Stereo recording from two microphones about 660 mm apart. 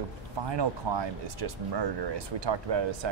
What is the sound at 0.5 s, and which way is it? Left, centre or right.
Speech, right.